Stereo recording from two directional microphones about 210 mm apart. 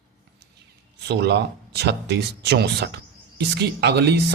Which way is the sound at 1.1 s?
50° right (ahead or behind).